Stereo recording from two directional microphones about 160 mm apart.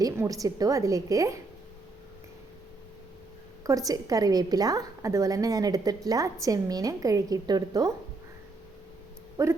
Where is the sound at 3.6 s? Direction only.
20° right (ahead or behind).